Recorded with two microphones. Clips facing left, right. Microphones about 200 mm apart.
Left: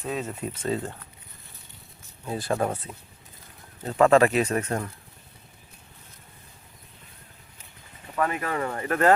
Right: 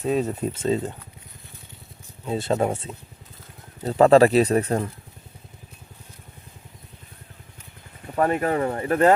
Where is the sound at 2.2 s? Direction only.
25° right (ahead or behind).